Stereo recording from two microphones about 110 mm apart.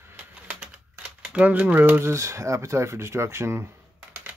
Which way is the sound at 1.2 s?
10° right (ahead or behind).